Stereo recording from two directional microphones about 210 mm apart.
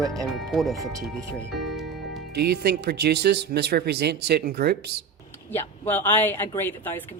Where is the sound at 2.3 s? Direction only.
50° right (ahead or behind).